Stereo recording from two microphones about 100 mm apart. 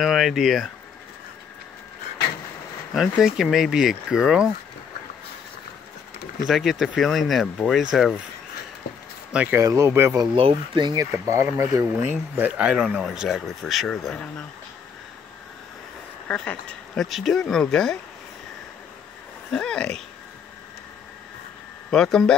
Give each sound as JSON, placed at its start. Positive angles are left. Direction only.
{"t": 0.0, "sound": "speech", "side_deg": -5}
{"t": 2.9, "sound": "speech", "side_deg": -5}
{"t": 6.4, "sound": "speech", "side_deg": 0}
{"t": 9.3, "sound": "speech", "side_deg": -10}
{"t": 9.6, "sound": "speech", "side_deg": -30}
{"t": 10.5, "sound": "speech", "side_deg": -45}
{"t": 11.2, "sound": "speech", "side_deg": -25}
{"t": 16.3, "sound": "speech", "side_deg": 15}
{"t": 19.5, "sound": "speech", "side_deg": 10}
{"t": 21.9, "sound": "speech", "side_deg": 5}